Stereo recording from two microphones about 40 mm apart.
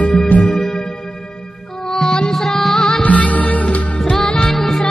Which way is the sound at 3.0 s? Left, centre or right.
Left.